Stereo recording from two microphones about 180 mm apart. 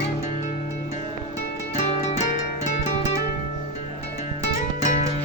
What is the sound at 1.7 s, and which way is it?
Music, 40° left (ahead or behind).